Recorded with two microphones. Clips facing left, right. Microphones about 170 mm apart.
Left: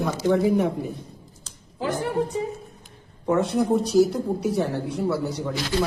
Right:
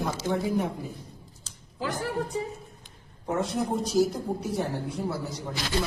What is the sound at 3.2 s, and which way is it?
Speech, 70° left (ahead or behind).